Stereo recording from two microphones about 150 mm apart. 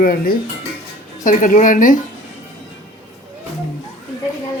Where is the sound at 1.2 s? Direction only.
60° left (ahead or behind).